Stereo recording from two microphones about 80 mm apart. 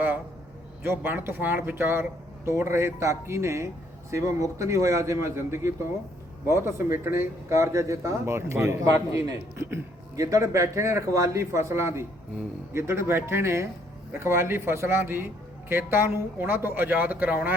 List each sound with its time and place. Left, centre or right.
0.8 s a man's voice: right